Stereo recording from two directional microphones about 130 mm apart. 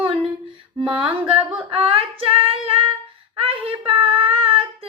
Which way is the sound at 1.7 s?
45° right (ahead or behind).